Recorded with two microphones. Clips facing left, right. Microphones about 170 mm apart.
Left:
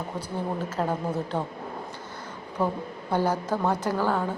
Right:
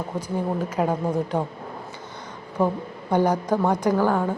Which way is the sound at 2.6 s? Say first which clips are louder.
Right 4 dB; 15° right (ahead or behind).